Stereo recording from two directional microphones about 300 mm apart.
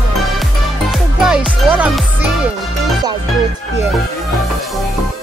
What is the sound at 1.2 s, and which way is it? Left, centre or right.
Music, centre.